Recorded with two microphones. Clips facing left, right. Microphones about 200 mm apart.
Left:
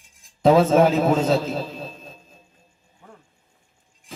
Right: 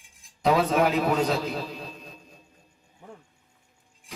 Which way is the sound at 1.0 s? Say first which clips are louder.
Left 5 dB; 25° left (ahead or behind).